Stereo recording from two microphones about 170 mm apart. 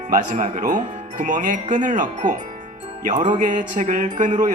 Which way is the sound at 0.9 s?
50° right (ahead or behind).